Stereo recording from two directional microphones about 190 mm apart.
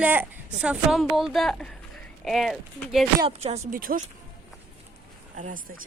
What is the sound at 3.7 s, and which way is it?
Speech, 45° right (ahead or behind).